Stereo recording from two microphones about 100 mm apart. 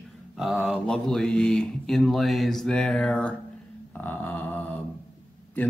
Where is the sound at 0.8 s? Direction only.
5° left (ahead or behind).